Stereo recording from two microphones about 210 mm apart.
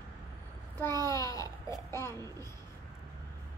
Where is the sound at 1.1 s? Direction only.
15° left (ahead or behind).